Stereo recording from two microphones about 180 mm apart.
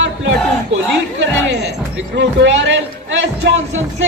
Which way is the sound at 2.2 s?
85° right.